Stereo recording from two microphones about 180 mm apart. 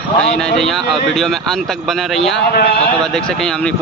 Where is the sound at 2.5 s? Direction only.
60° left (ahead or behind).